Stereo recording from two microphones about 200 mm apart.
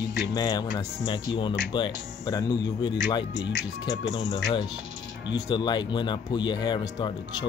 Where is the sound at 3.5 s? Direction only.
70° left (ahead or behind).